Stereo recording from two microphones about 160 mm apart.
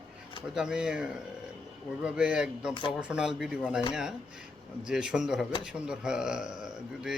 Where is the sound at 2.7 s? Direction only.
30° left (ahead or behind).